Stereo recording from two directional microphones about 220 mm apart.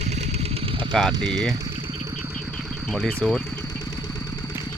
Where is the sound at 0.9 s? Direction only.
Centre (ahead or behind).